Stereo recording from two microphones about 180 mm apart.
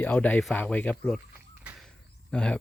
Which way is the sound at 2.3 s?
5° left (ahead or behind).